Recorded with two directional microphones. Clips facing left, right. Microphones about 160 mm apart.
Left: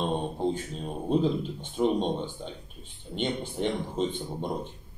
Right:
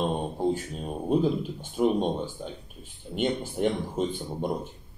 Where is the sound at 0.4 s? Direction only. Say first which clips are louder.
Right 3 dB; 10° right (ahead or behind).